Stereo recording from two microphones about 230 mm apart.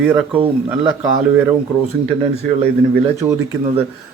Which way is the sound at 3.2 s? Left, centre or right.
Centre.